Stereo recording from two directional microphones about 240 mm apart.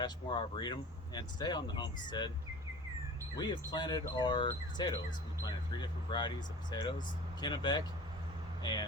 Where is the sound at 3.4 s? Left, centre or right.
Centre.